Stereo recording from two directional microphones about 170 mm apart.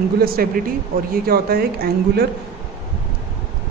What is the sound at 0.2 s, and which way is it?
A man's voice, 60° right (ahead or behind).